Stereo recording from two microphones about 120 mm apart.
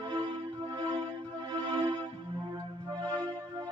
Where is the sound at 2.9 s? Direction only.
35° right (ahead or behind).